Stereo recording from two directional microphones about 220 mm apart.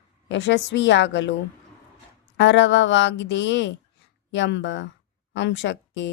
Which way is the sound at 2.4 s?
55° left (ahead or behind).